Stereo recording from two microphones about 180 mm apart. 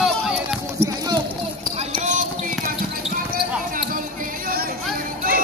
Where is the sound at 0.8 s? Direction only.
35° right (ahead or behind).